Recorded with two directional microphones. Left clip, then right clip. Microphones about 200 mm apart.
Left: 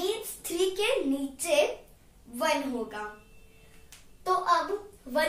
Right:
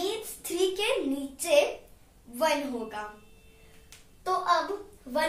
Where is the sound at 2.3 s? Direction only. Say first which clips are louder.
Right 1 dB; 10° right (ahead or behind).